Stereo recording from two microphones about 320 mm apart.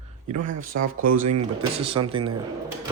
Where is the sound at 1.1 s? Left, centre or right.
Right.